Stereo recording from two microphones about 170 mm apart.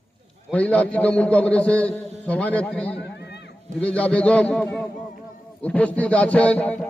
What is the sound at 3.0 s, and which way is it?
Run, 80° left.